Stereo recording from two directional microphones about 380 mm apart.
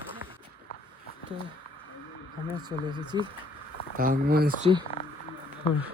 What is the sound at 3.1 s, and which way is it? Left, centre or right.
Speech, centre.